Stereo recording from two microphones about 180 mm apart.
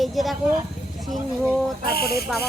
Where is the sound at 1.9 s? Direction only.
60° left (ahead or behind).